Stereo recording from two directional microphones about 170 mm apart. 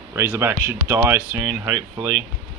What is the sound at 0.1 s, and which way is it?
Speech, 15° right (ahead or behind).